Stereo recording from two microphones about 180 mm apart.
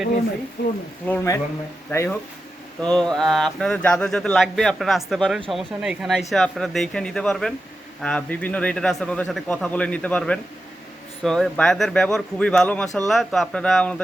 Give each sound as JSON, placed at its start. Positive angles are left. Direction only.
{"t": 0.6, "sound": "speech", "side_deg": 65}
{"t": 1.0, "sound": "a man's voice", "side_deg": 15}